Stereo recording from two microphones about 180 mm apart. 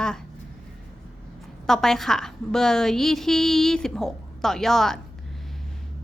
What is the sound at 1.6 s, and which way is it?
A woman's voice, centre (ahead or behind).